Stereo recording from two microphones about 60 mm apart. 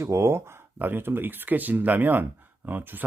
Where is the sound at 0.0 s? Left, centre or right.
Right.